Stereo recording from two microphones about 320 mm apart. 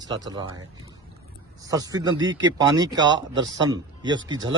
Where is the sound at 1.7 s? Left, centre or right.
Centre.